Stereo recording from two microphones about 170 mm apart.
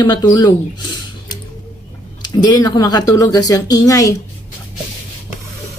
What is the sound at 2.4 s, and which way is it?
A woman's voice, 20° left (ahead or behind).